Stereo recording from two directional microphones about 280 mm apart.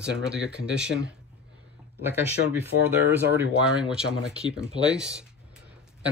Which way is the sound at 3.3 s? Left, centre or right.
Centre.